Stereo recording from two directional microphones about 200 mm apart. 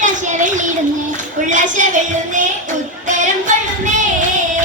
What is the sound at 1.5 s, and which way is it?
Music, 40° right (ahead or behind).